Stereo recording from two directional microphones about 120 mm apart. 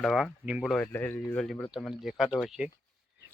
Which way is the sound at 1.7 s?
5° right (ahead or behind).